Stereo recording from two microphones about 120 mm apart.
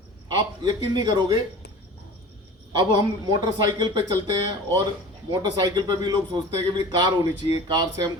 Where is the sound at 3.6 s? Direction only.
40° right (ahead or behind).